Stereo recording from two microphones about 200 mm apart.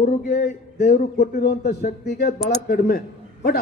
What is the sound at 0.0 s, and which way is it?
A man's voice, 45° left (ahead or behind).